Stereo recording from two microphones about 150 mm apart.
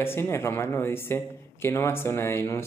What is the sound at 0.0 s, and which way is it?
Speech, 15° left (ahead or behind).